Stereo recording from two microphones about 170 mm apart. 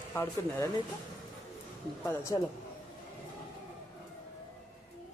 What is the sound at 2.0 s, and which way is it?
Speech, 15° left (ahead or behind).